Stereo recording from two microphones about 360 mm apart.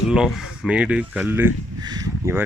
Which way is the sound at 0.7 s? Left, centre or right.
Centre.